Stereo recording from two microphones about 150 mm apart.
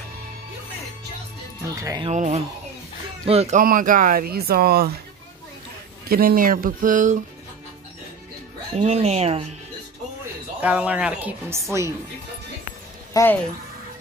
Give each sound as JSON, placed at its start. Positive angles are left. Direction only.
{"t": 1.8, "sound": "speech", "side_deg": -20}
{"t": 2.0, "sound": "speech", "side_deg": -50}
{"t": 3.5, "sound": "speech", "side_deg": -65}
{"t": 6.0, "sound": "speech", "side_deg": -80}
{"t": 8.7, "sound": "speech", "side_deg": -45}
{"t": 10.6, "sound": "a woman's voice", "side_deg": -10}
{"t": 13.1, "sound": "speech", "side_deg": 15}